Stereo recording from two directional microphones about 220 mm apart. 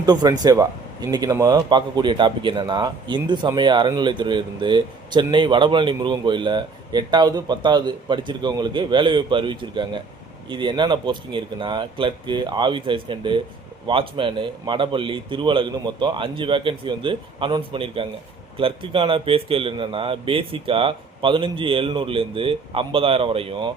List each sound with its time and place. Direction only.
0.0 s speech: 15° right (ahead or behind)